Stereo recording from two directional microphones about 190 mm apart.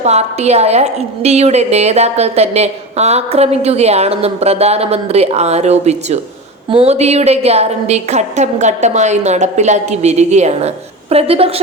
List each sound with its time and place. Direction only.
0.0 s a woman's voice: 35° right (ahead or behind)